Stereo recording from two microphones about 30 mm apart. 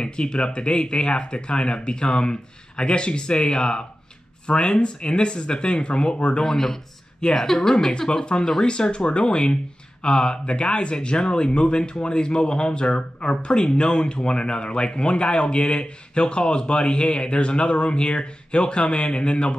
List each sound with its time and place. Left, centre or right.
0.0 s speech: left
6.4 s a woman's voice: centre
8.8 s speech: left